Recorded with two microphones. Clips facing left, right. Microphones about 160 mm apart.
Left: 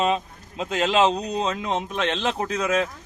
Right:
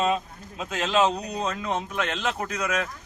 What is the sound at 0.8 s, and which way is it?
A man's voice, 30° left (ahead or behind).